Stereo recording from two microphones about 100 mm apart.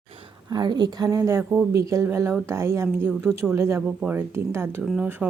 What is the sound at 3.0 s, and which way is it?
Speech, 15° right (ahead or behind).